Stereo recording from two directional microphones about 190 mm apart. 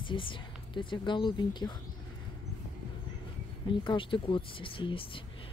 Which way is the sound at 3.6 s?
25° left (ahead or behind).